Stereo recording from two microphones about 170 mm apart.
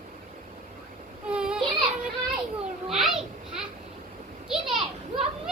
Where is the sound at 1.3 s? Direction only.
5° right (ahead or behind).